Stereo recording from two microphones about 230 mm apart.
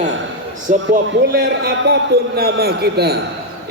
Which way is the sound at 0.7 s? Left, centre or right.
Right.